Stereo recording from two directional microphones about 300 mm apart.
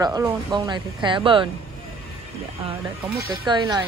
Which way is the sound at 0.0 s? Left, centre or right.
Centre.